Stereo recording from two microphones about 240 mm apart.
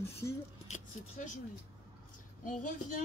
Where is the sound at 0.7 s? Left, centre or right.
Left.